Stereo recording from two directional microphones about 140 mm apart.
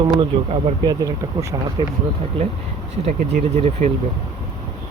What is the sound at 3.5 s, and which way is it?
Speech, 55° right (ahead or behind).